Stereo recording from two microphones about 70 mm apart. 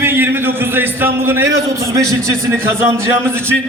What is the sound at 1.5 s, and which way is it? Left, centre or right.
A man's voice, right.